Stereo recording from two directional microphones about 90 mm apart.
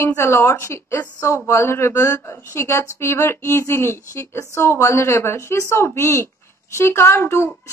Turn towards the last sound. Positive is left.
turn(degrees=30)  # may be behind; listen again after turning